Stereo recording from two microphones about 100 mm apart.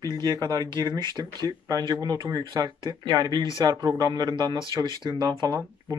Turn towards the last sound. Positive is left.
turn(degrees=-40)  # may be behind; listen again after turning